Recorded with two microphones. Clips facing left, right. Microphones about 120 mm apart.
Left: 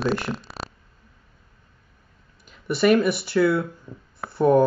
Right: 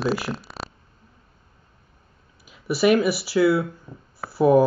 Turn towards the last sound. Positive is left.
turn(degrees=-5)  # may be behind; listen again after turning